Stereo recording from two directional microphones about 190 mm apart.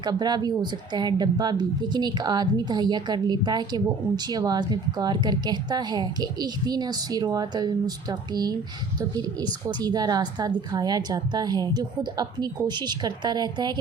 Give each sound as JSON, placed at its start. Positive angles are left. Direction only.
{"t": 0.0, "sound": "speech", "side_deg": -20}